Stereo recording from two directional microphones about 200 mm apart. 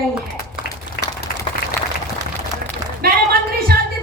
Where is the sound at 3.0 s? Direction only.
50° right (ahead or behind).